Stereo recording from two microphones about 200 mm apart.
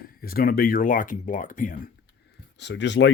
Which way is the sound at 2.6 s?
60° left (ahead or behind).